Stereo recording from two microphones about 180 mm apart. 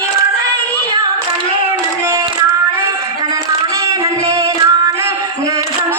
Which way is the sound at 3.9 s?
20° right (ahead or behind).